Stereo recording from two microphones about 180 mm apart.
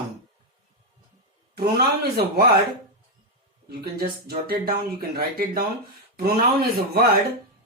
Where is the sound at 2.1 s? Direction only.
60° right (ahead or behind).